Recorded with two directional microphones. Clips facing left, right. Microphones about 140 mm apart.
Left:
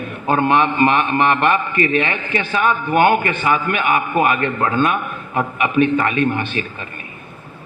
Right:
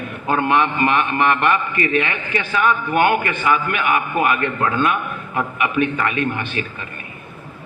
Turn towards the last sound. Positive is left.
turn(degrees=30)  # may be behind; listen again after turning